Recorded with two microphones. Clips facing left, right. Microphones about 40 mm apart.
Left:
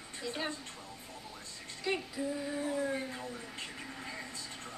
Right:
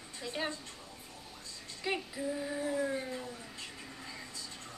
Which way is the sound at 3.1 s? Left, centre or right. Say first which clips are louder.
Even; left.